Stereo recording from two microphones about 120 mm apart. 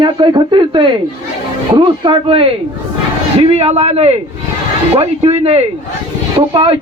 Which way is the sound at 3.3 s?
60° right (ahead or behind).